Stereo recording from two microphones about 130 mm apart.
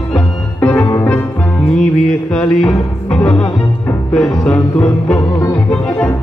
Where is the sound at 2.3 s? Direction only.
10° left (ahead or behind).